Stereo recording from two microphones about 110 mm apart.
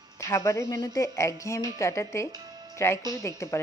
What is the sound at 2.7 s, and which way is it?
Speech, 25° left (ahead or behind).